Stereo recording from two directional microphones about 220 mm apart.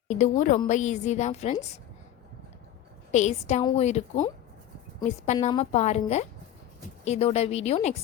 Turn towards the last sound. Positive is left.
turn(degrees=30)  # may be behind; listen again after turning